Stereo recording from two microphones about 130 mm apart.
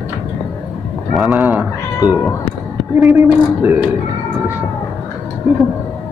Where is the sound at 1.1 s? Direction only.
Centre (ahead or behind).